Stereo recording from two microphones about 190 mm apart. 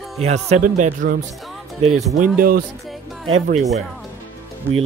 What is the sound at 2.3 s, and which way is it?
Speech, 50° right (ahead or behind).